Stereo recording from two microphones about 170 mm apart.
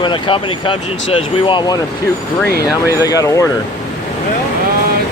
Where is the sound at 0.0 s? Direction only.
30° left (ahead or behind).